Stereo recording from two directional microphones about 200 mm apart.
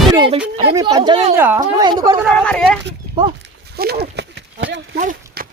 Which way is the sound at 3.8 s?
55° right (ahead or behind).